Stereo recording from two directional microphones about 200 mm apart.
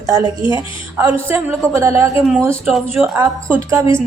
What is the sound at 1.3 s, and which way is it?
A woman's voice, 15° right (ahead or behind).